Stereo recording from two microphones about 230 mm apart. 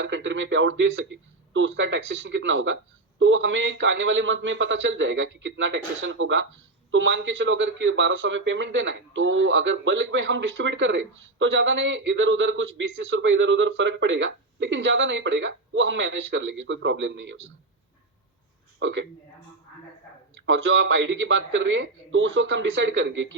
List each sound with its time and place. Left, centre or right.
0.0 s a man's voice: right
18.8 s speech: right
20.4 s a man's voice: right